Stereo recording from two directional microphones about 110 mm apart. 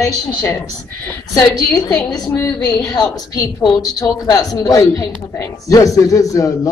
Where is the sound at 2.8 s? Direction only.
40° left (ahead or behind).